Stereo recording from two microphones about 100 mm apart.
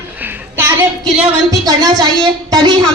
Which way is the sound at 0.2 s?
20° right (ahead or behind).